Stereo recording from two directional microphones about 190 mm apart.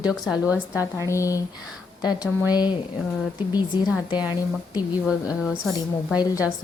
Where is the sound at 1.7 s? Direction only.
5° right (ahead or behind).